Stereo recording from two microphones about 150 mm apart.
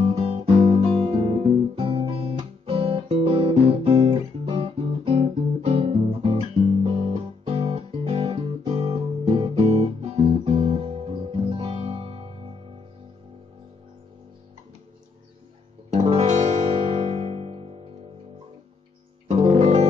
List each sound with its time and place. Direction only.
0.0 s guitar: 35° right (ahead or behind)
15.9 s music: 45° right (ahead or behind)
19.2 s music: 45° right (ahead or behind)